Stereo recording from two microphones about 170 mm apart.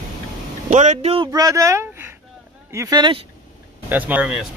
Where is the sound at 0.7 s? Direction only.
45° right (ahead or behind).